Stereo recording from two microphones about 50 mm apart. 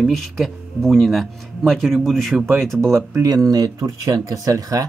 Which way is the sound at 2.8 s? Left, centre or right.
Right.